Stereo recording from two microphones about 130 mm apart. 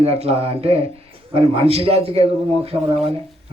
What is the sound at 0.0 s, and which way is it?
Speech, 50° right (ahead or behind).